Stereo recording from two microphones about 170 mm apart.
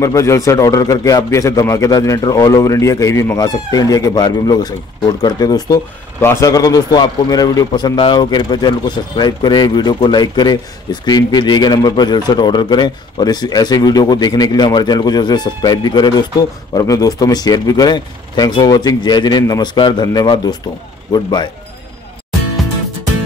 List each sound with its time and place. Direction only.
0.0 s a man's voice: 15° left (ahead or behind)